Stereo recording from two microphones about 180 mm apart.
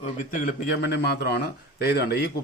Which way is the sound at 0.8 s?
65° left (ahead or behind).